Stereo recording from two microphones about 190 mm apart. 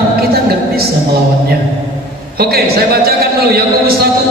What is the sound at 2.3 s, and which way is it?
A man's voice, 55° right (ahead or behind).